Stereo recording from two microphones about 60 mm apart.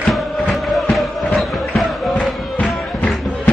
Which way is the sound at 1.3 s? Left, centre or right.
Centre.